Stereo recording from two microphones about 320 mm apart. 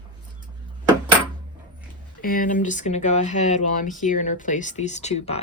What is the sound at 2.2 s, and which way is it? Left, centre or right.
Speech, left.